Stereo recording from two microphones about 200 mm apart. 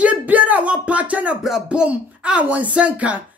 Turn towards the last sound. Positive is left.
turn(degrees=-5)  # may be behind; listen again after turning